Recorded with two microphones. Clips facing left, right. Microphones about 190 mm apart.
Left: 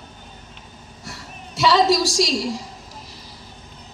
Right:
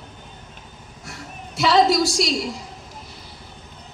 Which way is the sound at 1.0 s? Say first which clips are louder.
Right 1 dB; 50° right (ahead or behind).